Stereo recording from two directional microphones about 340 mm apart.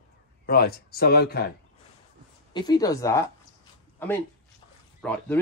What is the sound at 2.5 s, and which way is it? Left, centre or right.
Speech, centre.